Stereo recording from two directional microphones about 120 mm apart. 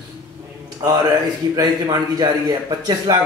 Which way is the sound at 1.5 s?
30° right (ahead or behind).